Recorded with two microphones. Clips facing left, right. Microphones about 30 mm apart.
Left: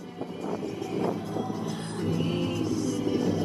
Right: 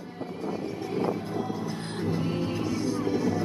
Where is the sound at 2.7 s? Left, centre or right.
Right.